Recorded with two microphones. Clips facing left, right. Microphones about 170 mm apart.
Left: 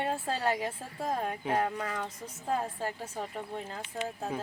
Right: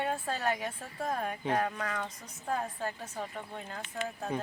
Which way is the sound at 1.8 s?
10° left (ahead or behind).